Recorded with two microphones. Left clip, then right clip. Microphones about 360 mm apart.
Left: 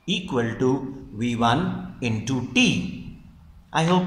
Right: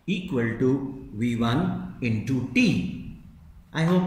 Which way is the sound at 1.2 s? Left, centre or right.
Centre.